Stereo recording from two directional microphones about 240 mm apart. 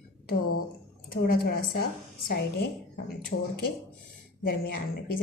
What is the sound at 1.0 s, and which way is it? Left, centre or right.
A woman's voice, left.